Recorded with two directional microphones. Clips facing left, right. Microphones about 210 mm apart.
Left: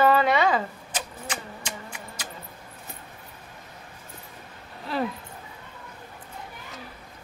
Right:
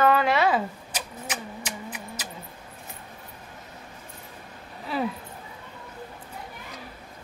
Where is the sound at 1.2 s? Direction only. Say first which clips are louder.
Right 1 dB; 5° right (ahead or behind).